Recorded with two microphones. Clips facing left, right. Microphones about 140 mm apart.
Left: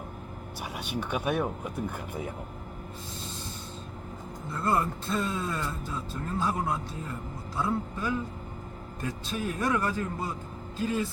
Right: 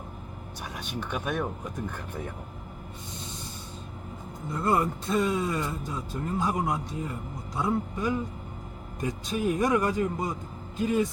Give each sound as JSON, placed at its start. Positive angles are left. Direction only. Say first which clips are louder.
{"t": 0.9, "sound": "speech", "louder": "left 2 dB", "side_deg": 10}
{"t": 4.5, "sound": "speech", "louder": "right 2 dB", "side_deg": -15}